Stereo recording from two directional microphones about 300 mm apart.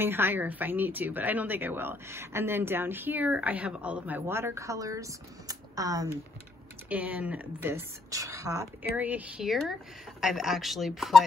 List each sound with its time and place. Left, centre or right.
0.0 s speech: centre